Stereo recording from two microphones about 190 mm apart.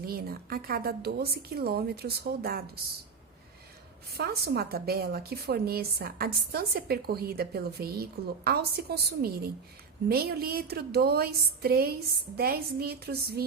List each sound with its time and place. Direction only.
0.0 s a woman's voice: 50° right (ahead or behind)
4.2 s a woman's voice: 55° right (ahead or behind)